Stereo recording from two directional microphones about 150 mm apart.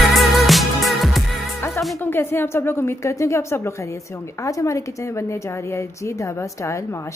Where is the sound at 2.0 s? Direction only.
15° left (ahead or behind).